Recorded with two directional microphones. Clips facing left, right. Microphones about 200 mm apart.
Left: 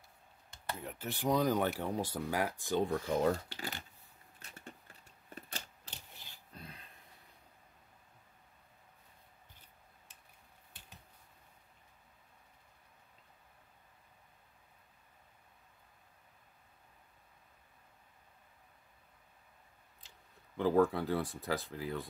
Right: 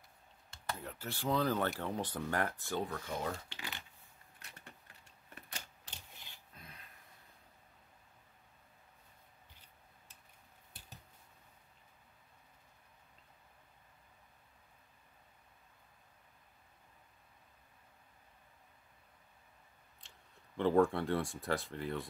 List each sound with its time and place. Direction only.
0.8 s speech: 20° left (ahead or behind)
2.8 s speech: 40° left (ahead or behind)
6.5 s a sound: 30° left (ahead or behind)
20.5 s speech: centre (ahead or behind)